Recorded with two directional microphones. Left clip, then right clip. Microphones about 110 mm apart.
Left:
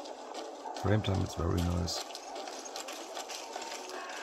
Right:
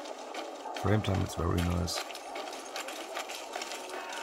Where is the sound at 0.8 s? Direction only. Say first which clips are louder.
Right 1 dB; 10° right (ahead or behind).